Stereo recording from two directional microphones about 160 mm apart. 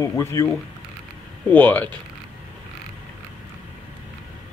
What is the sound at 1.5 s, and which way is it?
Speech, 10° left (ahead or behind).